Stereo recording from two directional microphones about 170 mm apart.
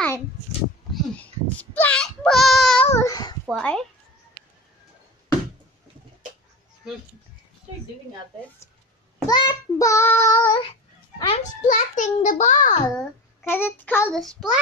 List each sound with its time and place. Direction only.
0.9 s baby cry: 5° left (ahead or behind)
2.9 s babbling: 20° left (ahead or behind)
3.4 s a child's voice: 5° left (ahead or behind)
9.3 s child singing: 20° left (ahead or behind)
11.6 s a child's voice: 45° left (ahead or behind)
12.8 s a child's voice: 15° left (ahead or behind)
14.2 s a child's voice: centre (ahead or behind)